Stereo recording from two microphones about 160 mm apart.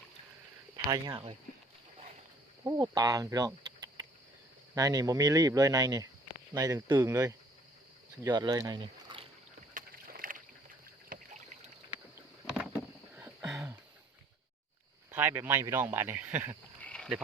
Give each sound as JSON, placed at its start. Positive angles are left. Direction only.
{"t": 0.9, "sound": "speech", "side_deg": -25}
{"t": 2.6, "sound": "speech", "side_deg": -25}
{"t": 9.7, "sound": "rowboat", "side_deg": -60}
{"t": 11.1, "sound": "rowboat", "side_deg": -50}
{"t": 12.5, "sound": "vehicle", "side_deg": -5}
{"t": 13.1, "sound": "a sound", "side_deg": -10}
{"t": 15.1, "sound": "speech", "side_deg": -15}
{"t": 16.8, "sound": "a sound", "side_deg": 5}